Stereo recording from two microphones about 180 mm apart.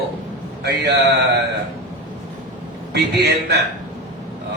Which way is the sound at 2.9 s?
65° right (ahead or behind).